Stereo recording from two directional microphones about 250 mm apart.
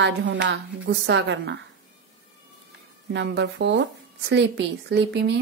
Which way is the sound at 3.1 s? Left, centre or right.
Right.